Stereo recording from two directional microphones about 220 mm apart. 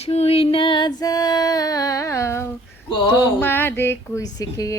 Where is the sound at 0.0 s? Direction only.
30° left (ahead or behind); by 2.5 s 10° left (ahead or behind).